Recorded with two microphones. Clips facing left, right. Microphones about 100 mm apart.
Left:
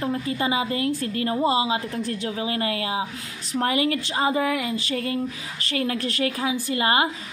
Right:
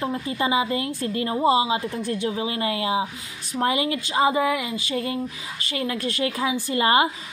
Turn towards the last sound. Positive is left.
turn(degrees=-30)  # may be behind; listen again after turning